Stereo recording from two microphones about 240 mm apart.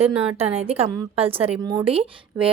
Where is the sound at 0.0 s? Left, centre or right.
Right.